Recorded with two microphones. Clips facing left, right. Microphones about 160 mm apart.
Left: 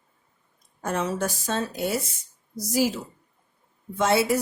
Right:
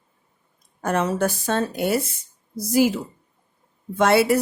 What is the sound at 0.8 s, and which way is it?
Speech, 60° right (ahead or behind).